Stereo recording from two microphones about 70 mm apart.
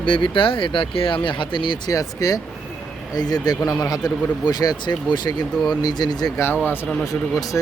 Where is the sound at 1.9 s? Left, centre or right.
Left.